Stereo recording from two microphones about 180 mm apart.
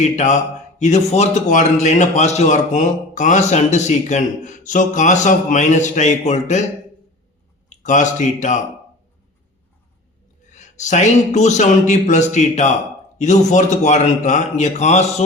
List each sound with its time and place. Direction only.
0.0 s a man's voice: 40° left (ahead or behind)
7.7 s speech: 45° left (ahead or behind)
10.8 s a man's voice: 40° left (ahead or behind)